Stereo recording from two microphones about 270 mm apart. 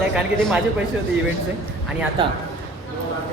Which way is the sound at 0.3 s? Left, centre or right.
Centre.